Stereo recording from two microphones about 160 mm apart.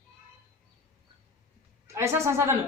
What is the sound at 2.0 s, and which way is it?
Speech, 15° right (ahead or behind).